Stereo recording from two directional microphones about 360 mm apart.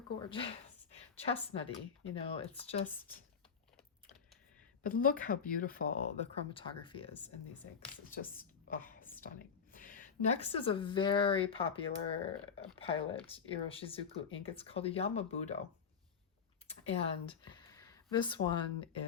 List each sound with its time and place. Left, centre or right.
0.2 s a sound: centre
1.5 s speech: centre
4.8 s a woman's voice: left
9.1 s whispering: centre
9.7 s speech: left
16.6 s speech: centre